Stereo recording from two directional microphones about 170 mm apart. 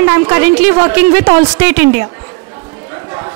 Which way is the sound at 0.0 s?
10° right (ahead or behind).